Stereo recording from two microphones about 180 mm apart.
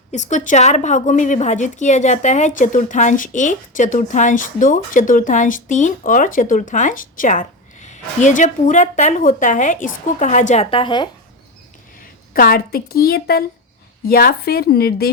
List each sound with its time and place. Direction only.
0.1 s a woman's voice: 40° left (ahead or behind); by 11.1 s 25° left (ahead or behind)
12.3 s a woman's voice: 55° left (ahead or behind)